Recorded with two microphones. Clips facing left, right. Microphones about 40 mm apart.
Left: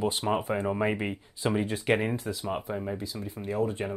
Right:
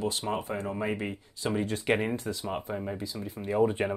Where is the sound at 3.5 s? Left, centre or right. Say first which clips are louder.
Right 4 dB; right.